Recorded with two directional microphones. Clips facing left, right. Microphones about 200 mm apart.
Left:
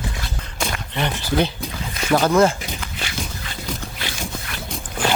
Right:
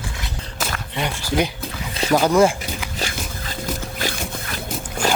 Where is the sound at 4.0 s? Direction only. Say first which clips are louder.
Right 3 dB; 45° right (ahead or behind).